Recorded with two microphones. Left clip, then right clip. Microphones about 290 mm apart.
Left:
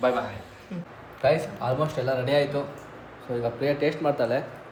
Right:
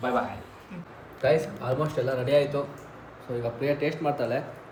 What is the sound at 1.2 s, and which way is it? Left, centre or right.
A man's voice, centre.